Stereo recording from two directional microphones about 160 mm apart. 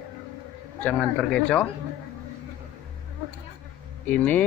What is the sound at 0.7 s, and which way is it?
Speech, 5° left (ahead or behind).